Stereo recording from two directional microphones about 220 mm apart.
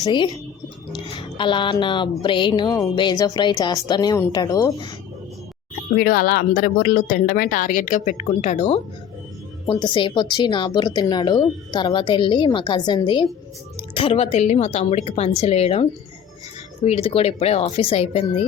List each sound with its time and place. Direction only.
0.0 s speech: 20° left (ahead or behind)
1.4 s speech: 20° left (ahead or behind)
6.0 s speech: 40° left (ahead or behind); by 18.3 s 25° left (ahead or behind)